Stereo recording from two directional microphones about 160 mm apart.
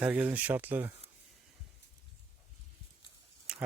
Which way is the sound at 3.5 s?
5° right (ahead or behind).